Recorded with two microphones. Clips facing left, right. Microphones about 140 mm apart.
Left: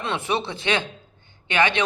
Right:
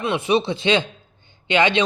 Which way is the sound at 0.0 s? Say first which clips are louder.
Right 6 dB; 15° right (ahead or behind).